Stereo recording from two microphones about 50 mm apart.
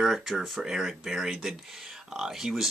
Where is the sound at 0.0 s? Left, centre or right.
Centre.